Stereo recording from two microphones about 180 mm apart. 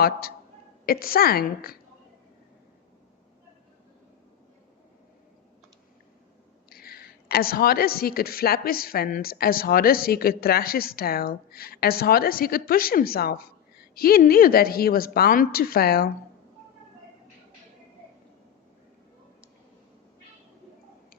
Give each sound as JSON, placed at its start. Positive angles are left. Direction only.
{"t": 0.0, "sound": "a woman's voice", "side_deg": 55}
{"t": 6.7, "sound": "a woman's voice", "side_deg": 55}